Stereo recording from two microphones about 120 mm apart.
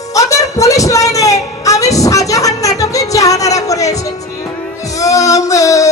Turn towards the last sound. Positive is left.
turn(degrees=30)  # may be behind; listen again after turning